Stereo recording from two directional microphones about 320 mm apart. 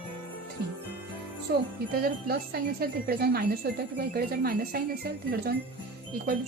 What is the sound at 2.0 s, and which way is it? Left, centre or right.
A woman's voice, right.